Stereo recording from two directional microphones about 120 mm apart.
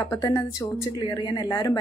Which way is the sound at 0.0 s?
30° left (ahead or behind).